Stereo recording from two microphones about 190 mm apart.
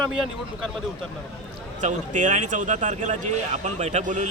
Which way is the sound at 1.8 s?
40° right (ahead or behind).